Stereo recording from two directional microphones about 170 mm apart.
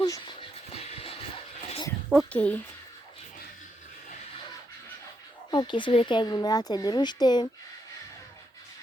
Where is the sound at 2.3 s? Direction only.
5° left (ahead or behind).